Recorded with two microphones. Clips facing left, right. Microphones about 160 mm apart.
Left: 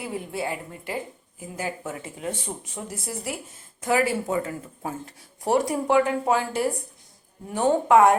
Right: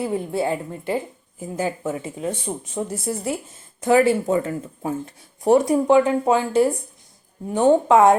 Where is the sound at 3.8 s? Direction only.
25° right (ahead or behind).